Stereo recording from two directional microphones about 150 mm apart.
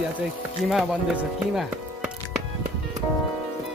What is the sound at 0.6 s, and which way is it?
Speech, 5° right (ahead or behind).